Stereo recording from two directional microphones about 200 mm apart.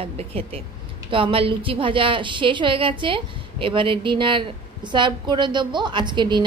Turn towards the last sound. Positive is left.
turn(degrees=-20)  # may be behind; listen again after turning